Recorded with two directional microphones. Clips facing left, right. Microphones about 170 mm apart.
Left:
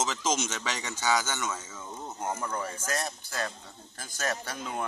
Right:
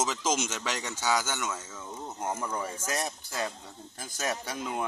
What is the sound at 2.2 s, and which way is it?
Speech, 5° right (ahead or behind).